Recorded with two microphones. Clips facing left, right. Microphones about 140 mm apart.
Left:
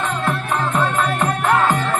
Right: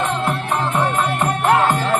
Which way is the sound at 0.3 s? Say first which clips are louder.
Even; 20° right (ahead or behind).